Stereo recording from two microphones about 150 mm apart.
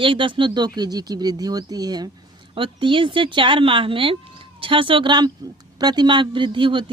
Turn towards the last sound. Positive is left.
turn(degrees=-35)  # may be behind; listen again after turning